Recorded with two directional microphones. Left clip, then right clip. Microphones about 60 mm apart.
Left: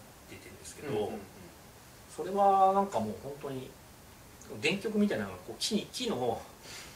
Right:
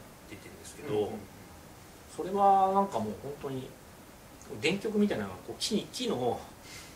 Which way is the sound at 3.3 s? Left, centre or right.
Right.